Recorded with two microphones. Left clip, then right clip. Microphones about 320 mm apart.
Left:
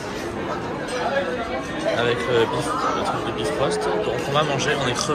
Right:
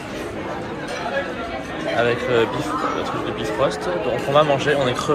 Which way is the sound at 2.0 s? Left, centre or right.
Centre.